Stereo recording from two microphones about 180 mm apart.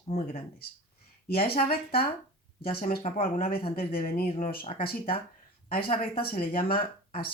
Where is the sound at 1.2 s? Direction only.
60° left (ahead or behind).